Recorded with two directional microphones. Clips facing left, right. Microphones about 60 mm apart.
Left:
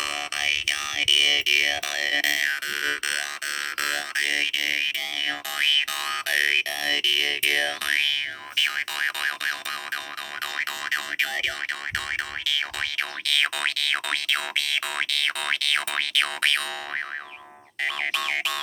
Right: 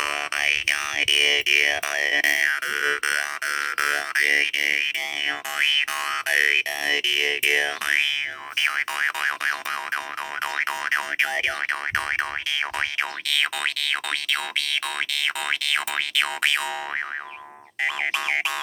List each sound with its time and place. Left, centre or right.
0.0 s a sound: right
13.3 s boing: centre
17.8 s boing: centre